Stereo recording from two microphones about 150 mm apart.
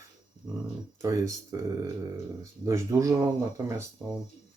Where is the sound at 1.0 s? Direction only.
20° right (ahead or behind).